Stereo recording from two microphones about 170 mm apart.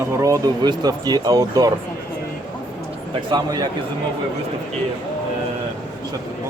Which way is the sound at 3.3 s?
25° right (ahead or behind).